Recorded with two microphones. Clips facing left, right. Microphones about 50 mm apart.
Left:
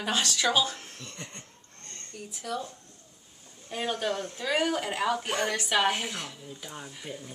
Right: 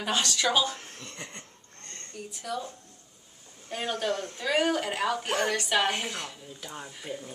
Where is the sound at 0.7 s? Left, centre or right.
Right.